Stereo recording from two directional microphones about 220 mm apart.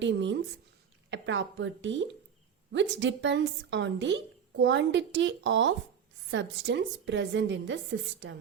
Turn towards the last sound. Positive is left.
turn(degrees=-55)  # may be behind; listen again after turning